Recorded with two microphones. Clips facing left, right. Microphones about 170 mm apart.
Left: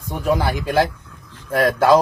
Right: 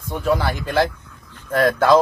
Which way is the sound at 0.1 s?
15° left (ahead or behind).